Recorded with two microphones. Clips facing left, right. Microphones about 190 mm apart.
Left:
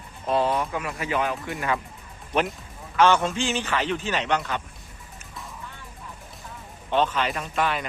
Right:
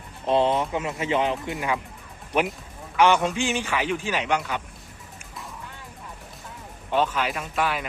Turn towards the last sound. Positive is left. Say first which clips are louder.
# even
turn(degrees=-5)  # may be behind; listen again after turning